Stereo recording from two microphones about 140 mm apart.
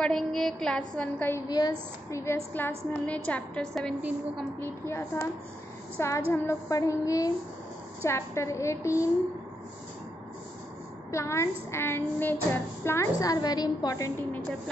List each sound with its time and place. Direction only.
0.0 s a woman's voice: 5° left (ahead or behind)
1.5 s a woman's voice: 25° left (ahead or behind); by 3.9 s 5° left (ahead or behind)
4.6 s a woman's voice: 20° left (ahead or behind)
11.1 s speech: 20° left (ahead or behind)